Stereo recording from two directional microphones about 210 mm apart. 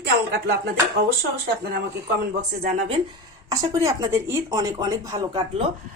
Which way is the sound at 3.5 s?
15° right (ahead or behind).